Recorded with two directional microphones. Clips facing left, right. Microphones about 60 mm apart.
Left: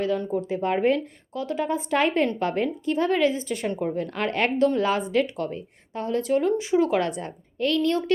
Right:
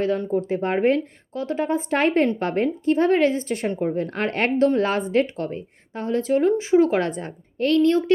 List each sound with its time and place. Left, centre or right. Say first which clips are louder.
0.3 s a woman's voice: right 2 dB; right
3.7 s a woman's voice: right 3 dB; right